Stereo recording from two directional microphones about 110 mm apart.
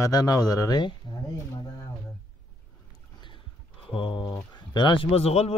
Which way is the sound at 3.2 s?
50° left (ahead or behind).